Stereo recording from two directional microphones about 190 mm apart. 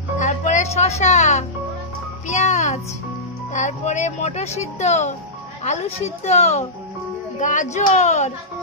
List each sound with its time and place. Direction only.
0.2 s music: 40° left (ahead or behind)
3.5 s speech: 40° left (ahead or behind)